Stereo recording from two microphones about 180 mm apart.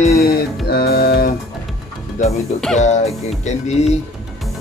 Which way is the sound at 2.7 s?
40° left (ahead or behind).